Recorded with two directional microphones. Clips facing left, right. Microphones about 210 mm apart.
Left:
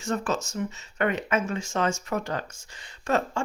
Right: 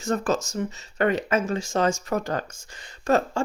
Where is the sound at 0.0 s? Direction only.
40° right (ahead or behind).